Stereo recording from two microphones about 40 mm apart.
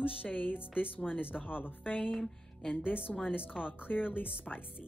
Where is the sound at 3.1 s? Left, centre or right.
Centre.